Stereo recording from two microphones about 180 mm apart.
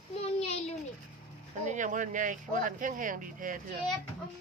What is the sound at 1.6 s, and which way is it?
Speech, 45° right (ahead or behind).